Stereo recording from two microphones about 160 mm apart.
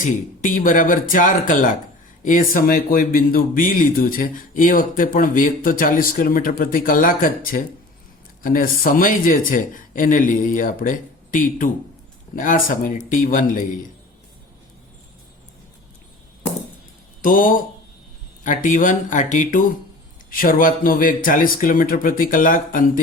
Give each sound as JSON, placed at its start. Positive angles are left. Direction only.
{"t": 0.0, "sound": "speech", "side_deg": 55}
{"t": 17.2, "sound": "speech", "side_deg": 60}